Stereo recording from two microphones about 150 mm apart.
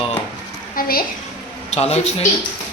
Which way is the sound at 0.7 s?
75° left (ahead or behind).